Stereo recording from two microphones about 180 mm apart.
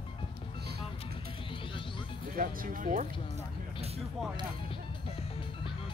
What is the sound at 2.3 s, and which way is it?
Speech, 50° right (ahead or behind).